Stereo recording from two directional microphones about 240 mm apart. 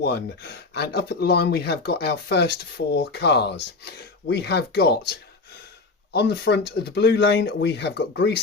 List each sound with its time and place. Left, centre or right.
0.0 s speech: left
6.1 s speech: left